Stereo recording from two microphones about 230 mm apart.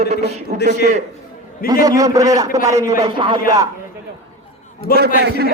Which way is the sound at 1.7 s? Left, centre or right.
Centre.